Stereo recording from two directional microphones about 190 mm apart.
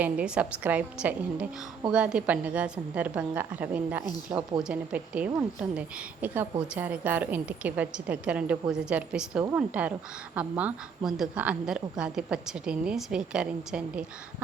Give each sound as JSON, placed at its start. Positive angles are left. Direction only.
{"t": 0.0, "sound": "a woman's voice", "side_deg": -5}